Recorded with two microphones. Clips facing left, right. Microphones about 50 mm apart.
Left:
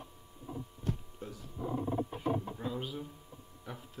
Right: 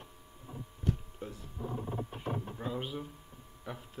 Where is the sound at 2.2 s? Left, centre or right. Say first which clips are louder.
Left 4 dB; centre.